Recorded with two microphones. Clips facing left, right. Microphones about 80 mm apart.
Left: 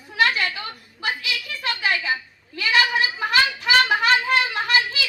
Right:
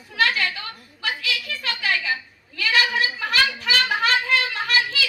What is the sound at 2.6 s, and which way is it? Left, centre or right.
Sheep, left.